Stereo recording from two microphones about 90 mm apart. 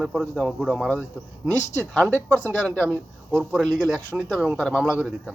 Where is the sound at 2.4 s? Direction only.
25° right (ahead or behind).